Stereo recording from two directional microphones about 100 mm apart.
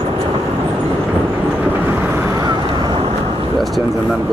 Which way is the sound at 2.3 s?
40° right (ahead or behind).